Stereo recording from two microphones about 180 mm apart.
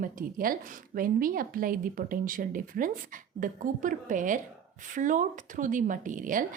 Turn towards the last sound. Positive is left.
turn(degrees=-45)  # may be behind; listen again after turning